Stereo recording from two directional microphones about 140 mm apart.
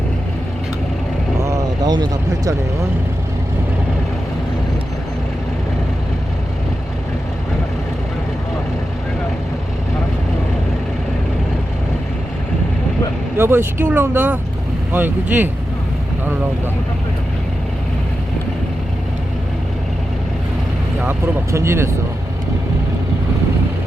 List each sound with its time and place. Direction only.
1.4 s vehicle: 20° right (ahead or behind)
13.3 s speech: 15° right (ahead or behind)
21.5 s speech: 20° right (ahead or behind)